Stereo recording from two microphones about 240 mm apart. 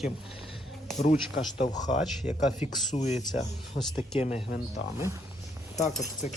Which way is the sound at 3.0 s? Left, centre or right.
Left.